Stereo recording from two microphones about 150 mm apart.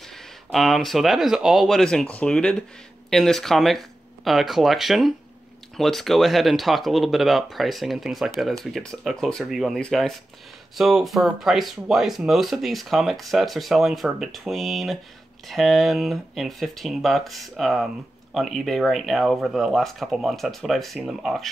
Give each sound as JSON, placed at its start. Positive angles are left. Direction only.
{"t": 0.5, "sound": "speech", "side_deg": 0}